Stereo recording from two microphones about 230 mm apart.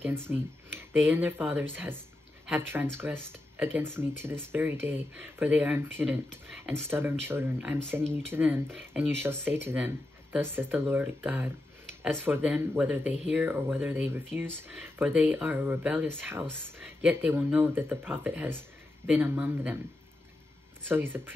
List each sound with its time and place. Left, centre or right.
0.3 s speech: centre
20.9 s speech: centre